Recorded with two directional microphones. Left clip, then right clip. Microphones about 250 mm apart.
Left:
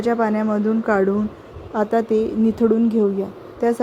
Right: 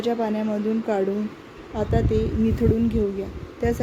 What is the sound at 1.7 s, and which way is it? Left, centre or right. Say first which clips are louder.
A woman's voice: left 5 dB; left.